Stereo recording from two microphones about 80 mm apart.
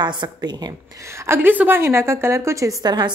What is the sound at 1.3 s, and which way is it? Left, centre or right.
A woman's voice, right.